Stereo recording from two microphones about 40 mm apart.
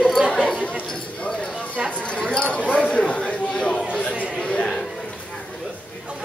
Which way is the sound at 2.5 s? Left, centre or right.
Left.